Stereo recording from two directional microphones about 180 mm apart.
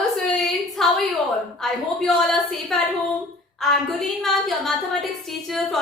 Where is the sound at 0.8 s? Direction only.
Centre (ahead or behind).